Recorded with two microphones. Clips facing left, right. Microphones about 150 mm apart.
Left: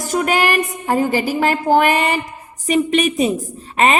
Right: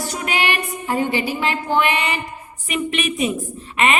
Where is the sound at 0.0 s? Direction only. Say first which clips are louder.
Left 6 dB; 45° left (ahead or behind).